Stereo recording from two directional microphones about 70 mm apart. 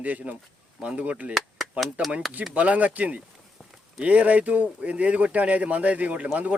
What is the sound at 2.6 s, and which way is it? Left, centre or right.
Speech, centre.